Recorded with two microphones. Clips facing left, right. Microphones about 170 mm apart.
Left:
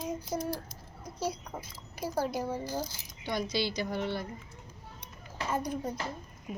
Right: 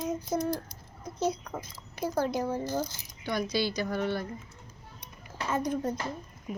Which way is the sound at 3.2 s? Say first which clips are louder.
Right 2 dB; 20° left (ahead or behind).